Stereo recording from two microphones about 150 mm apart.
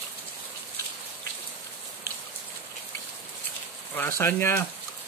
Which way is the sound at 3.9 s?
15° left (ahead or behind).